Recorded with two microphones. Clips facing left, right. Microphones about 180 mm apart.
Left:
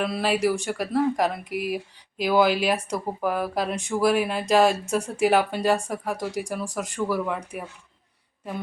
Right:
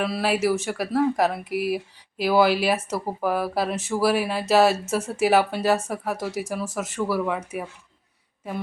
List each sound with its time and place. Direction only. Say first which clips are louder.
0.0 s speech: even; 5° right (ahead or behind)